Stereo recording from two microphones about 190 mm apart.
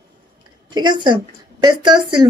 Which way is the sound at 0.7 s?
25° right (ahead or behind).